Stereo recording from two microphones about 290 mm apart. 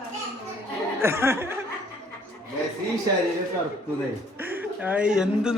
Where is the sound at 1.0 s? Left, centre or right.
Centre.